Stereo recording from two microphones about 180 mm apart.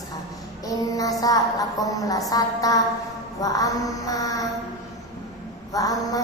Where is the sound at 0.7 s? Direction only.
20° left (ahead or behind).